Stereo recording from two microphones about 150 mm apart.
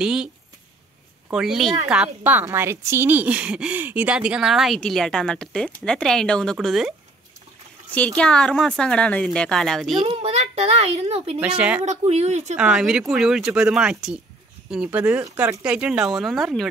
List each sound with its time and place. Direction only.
0.0 s speech: 5° right (ahead or behind)
1.3 s a woman's voice: 5° right (ahead or behind)
8.2 s a woman's voice: 5° left (ahead or behind)
10.0 s a child's voice: 45° right (ahead or behind)
11.3 s speech: 5° right (ahead or behind)
11.8 s a woman's voice: 50° right (ahead or behind)
12.5 s a woman's voice: 5° right (ahead or behind)